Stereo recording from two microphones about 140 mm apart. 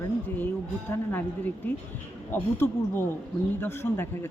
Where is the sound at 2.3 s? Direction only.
15° left (ahead or behind).